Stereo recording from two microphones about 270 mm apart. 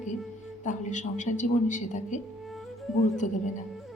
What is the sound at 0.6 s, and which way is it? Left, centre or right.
Speech, left.